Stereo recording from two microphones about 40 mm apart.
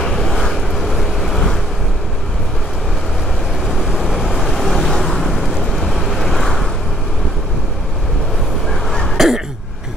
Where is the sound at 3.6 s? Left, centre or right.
Centre.